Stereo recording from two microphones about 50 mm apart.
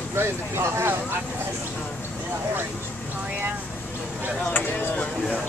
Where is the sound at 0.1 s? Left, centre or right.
Right.